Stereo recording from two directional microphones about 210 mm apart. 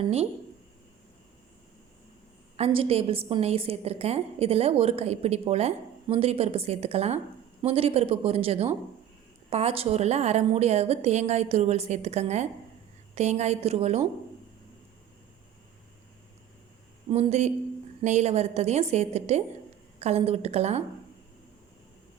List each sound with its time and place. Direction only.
0.0 s a woman's voice: 30° right (ahead or behind)
2.6 s a woman's voice: 30° right (ahead or behind)
17.1 s a woman's voice: 30° right (ahead or behind)